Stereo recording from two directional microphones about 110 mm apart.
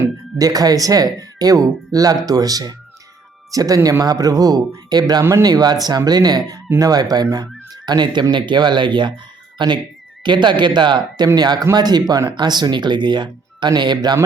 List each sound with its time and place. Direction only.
0.3 s speech: 35° right (ahead or behind)
5.2 s speech: 30° right (ahead or behind)